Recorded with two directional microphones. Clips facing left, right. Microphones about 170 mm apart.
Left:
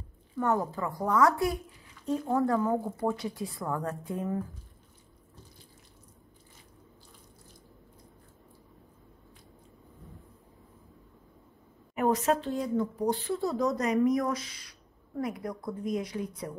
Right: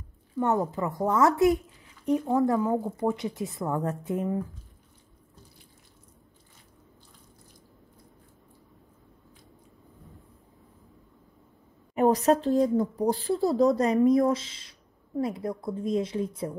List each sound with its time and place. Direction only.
0.4 s speech: 20° right (ahead or behind)
11.9 s speech: 35° right (ahead or behind)